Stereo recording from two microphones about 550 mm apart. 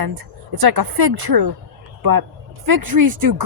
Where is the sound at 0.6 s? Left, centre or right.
Right.